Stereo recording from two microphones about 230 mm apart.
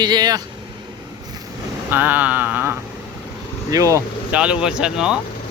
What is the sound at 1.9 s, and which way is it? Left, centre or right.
Speech, centre.